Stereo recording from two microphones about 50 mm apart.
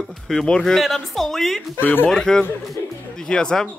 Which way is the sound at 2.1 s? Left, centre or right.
Centre.